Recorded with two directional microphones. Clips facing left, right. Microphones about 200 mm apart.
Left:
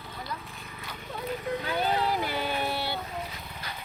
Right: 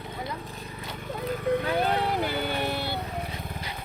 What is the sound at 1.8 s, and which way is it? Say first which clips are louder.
Vehicle: right 2 dB; 60° right (ahead or behind).